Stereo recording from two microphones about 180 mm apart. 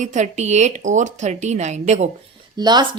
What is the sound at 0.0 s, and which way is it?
A woman's voice, 40° right (ahead or behind).